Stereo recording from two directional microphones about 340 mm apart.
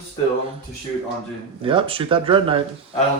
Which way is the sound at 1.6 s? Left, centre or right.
Centre.